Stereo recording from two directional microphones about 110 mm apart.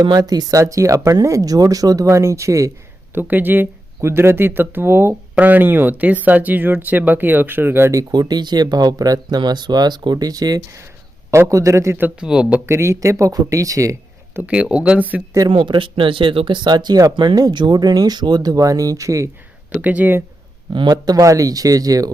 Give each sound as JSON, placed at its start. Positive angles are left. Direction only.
{"t": 0.0, "sound": "speech", "side_deg": -40}
{"t": 3.2, "sound": "speech", "side_deg": -15}
{"t": 8.1, "sound": "speech", "side_deg": -40}
{"t": 12.2, "sound": "speech", "side_deg": -10}
{"t": 12.6, "sound": "speech", "side_deg": -25}
{"t": 14.4, "sound": "speech", "side_deg": -10}
{"t": 15.4, "sound": "speech", "side_deg": -45}
{"t": 19.7, "sound": "speech", "side_deg": -15}
{"t": 20.7, "sound": "speech", "side_deg": -40}